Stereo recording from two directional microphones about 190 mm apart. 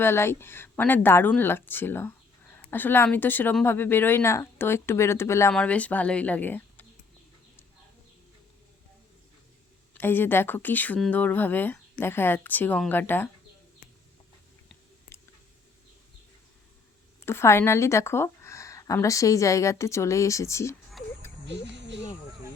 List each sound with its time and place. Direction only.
0.0 s speech: 15° left (ahead or behind)
10.0 s speech: 10° left (ahead or behind)
17.2 s speech: 15° left (ahead or behind)
21.4 s a sound: 65° right (ahead or behind)